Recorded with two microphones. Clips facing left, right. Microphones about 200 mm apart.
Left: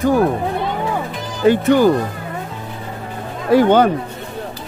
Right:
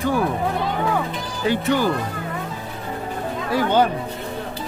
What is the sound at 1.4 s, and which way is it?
Speech, 50° left (ahead or behind).